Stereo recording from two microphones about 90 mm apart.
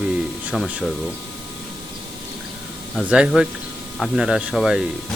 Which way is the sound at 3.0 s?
10° right (ahead or behind).